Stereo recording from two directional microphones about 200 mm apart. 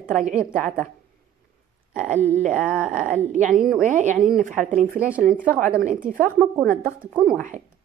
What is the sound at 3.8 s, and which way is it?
A woman's voice, 40° right (ahead or behind).